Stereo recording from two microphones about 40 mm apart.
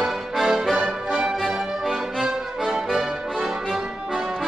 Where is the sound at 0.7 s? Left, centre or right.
Centre.